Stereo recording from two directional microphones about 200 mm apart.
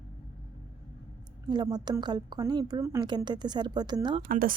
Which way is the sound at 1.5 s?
20° right (ahead or behind).